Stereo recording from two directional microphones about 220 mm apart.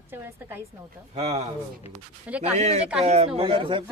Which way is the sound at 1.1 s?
30° right (ahead or behind).